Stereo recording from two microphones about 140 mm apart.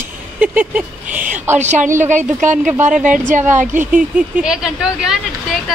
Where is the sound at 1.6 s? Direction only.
60° right (ahead or behind).